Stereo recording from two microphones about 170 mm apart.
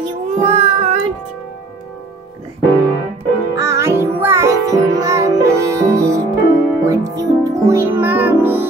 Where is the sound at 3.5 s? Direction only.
15° right (ahead or behind).